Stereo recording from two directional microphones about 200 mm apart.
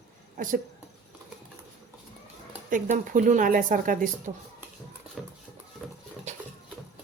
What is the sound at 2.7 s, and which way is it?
Speech, 40° right (ahead or behind).